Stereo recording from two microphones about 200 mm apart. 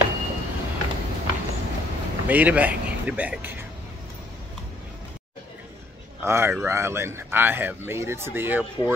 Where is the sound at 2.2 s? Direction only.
10° right (ahead or behind).